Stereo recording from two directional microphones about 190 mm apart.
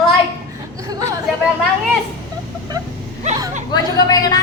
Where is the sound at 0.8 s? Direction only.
20° right (ahead or behind).